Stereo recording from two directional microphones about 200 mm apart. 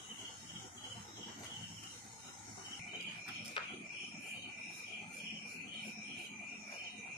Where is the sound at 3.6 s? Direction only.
25° left (ahead or behind).